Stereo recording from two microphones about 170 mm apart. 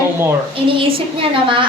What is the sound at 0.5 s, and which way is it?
Speech, 30° right (ahead or behind).